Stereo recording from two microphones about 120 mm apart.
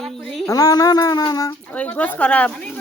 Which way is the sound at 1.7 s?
10° left (ahead or behind).